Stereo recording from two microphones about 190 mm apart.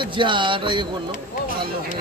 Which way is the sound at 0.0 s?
25° right (ahead or behind).